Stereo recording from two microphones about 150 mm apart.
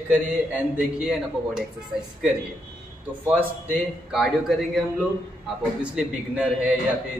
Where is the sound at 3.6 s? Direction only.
5° right (ahead or behind).